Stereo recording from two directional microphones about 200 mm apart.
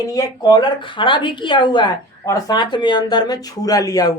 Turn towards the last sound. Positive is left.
turn(degrees=15)  # may be behind; listen again after turning